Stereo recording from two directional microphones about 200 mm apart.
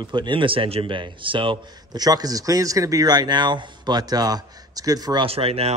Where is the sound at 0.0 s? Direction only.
25° right (ahead or behind).